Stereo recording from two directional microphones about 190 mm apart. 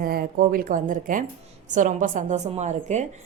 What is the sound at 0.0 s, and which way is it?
A woman's voice, 55° right (ahead or behind).